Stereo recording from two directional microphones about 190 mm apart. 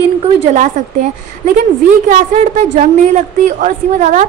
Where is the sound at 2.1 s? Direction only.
40° right (ahead or behind).